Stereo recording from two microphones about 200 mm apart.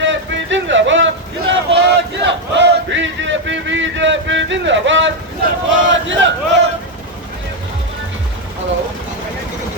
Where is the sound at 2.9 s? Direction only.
65° right (ahead or behind).